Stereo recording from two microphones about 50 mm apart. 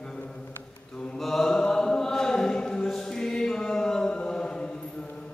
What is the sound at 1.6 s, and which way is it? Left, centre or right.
Choir, centre.